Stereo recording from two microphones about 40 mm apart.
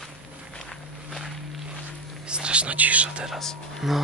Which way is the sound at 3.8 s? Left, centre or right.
Centre.